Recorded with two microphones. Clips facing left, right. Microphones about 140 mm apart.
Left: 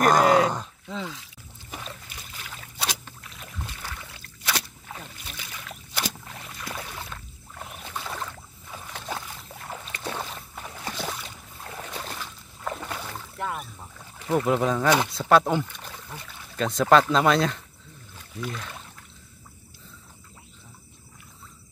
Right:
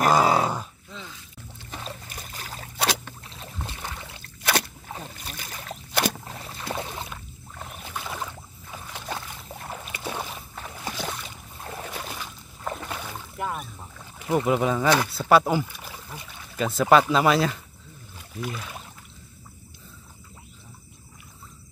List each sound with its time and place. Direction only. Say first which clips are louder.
0.0 s grunt: left 2 dB; 5° right (ahead or behind)
0.8 s a sound: left 8 dB; 90° left
1.9 s boat: right 3 dB; 40° right (ahead or behind)
2.8 s boat: right 6 dB; 65° right (ahead or behind)
3.3 s boat: right 1 dB; 30° right (ahead or behind)
4.4 s a sound: right 5 dB; 55° right (ahead or behind)
4.9 s boat: right 3 dB; 40° right (ahead or behind)
7.5 s rowboat: even; centre (ahead or behind)
8.9 s boat: even; centre (ahead or behind)
10.8 s a sound: even; centre (ahead or behind)
12.7 s boat: even; 10° right (ahead or behind)
14.1 s speech: even; 10° right (ahead or behind)
18.1 s rowboat: right 1 dB; 10° right (ahead or behind)